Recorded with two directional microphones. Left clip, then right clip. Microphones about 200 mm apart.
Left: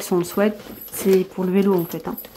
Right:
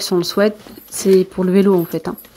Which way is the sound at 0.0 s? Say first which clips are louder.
Right 5 dB; 10° right (ahead or behind).